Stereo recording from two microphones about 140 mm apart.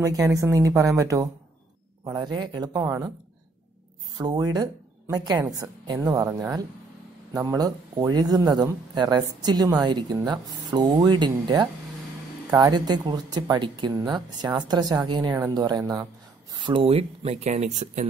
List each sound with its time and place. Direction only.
0.0 s a man's voice: 25° right (ahead or behind)
2.8 s speech: 20° right (ahead or behind)
4.2 s speech: 30° right (ahead or behind)
16.5 s speech: 35° right (ahead or behind); by 18.0 s 55° right (ahead or behind)